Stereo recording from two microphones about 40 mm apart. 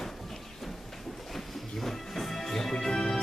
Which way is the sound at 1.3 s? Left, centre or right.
Centre.